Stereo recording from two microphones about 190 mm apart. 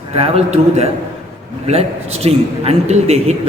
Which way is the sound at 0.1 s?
35° right (ahead or behind).